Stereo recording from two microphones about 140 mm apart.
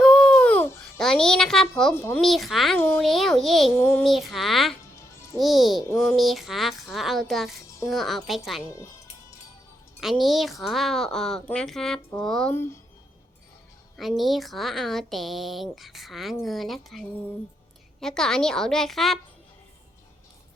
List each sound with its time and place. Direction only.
0.0 s babbling: 5° left (ahead or behind)
2.2 s a woman's voice: centre (ahead or behind)
2.7 s speech: 10° left (ahead or behind)
3.0 s a woman's voice: centre (ahead or behind)
3.8 s speech: 15° left (ahead or behind)
4.0 s a woman's voice: centre (ahead or behind)
10.0 s a woman's voice: centre (ahead or behind)
12.5 s speech: 15° left (ahead or behind)
13.9 s a woman's voice: centre (ahead or behind)